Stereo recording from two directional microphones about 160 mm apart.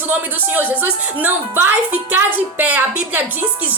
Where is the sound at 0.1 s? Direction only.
10° right (ahead or behind).